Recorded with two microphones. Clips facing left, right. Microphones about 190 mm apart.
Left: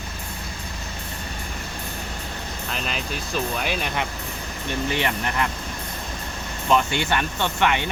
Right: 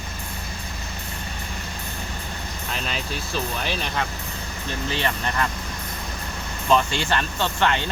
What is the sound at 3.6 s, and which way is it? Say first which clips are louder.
Speech: left 1 dB; 10° left (ahead or behind).